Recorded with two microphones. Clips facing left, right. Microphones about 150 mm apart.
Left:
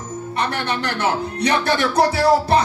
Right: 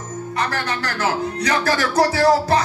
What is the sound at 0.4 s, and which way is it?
Music, 25° left (ahead or behind).